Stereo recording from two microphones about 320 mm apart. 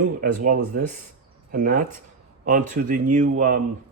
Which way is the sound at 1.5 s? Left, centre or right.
Right.